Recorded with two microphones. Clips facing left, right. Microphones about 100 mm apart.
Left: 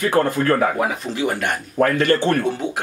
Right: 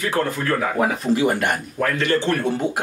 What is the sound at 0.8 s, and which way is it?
Speech, centre (ahead or behind).